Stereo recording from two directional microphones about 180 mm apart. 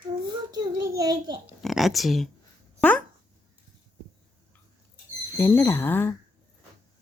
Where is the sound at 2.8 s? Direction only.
10° left (ahead or behind).